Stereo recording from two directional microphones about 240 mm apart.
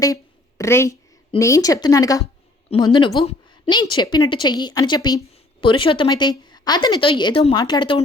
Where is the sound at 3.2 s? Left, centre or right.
Centre.